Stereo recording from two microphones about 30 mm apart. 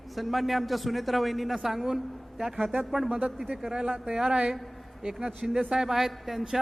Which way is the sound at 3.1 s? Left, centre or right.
Right.